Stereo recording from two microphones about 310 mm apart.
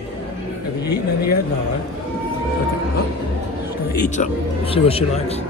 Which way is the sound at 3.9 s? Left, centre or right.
Left.